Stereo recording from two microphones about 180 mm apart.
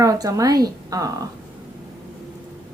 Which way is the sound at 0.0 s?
20° right (ahead or behind).